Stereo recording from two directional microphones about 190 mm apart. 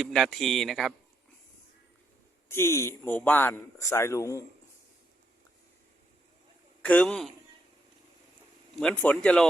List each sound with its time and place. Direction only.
0.0 s speech: centre (ahead or behind)
2.5 s speech: 15° left (ahead or behind)
6.8 s speech: 5° left (ahead or behind)
8.8 s speech: 5° left (ahead or behind)